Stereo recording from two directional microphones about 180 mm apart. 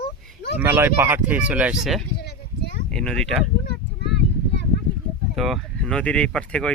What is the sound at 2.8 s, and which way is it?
Speech, 5° left (ahead or behind).